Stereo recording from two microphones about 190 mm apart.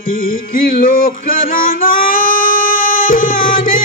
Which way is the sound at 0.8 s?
50° left (ahead or behind).